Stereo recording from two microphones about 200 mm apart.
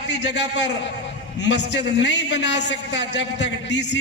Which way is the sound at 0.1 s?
60° left (ahead or behind).